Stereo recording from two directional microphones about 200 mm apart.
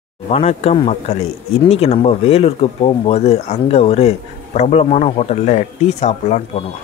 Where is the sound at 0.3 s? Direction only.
30° left (ahead or behind).